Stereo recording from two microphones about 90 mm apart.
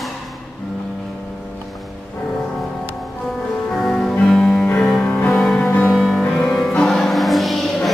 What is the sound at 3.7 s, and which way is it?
Music, 5° left (ahead or behind).